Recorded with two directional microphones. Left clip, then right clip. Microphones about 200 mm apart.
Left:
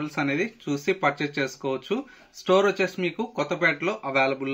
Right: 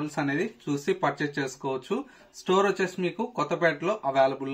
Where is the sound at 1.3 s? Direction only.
20° right (ahead or behind).